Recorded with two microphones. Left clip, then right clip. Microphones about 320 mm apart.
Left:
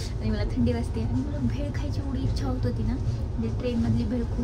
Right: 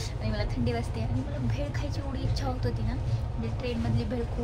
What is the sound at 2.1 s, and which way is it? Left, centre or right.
Speech, centre.